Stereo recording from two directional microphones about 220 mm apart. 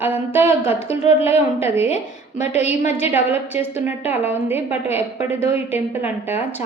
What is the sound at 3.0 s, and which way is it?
A woman's voice, 10° right (ahead or behind).